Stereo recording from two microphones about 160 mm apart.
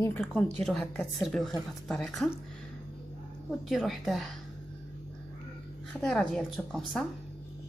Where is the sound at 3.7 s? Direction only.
Centre (ahead or behind).